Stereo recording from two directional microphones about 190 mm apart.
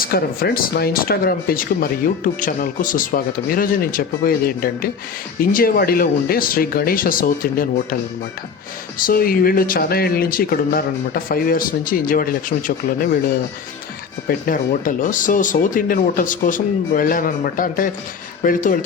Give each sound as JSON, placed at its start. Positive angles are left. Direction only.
{"t": 0.0, "sound": "speech", "side_deg": 50}
{"t": 9.0, "sound": "speech", "side_deg": 50}
{"t": 14.3, "sound": "speech", "side_deg": 45}